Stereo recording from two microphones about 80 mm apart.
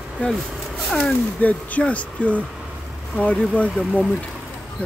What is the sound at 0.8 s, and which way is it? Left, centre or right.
Speech, centre.